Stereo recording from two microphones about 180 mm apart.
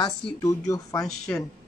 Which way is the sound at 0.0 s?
15° left (ahead or behind).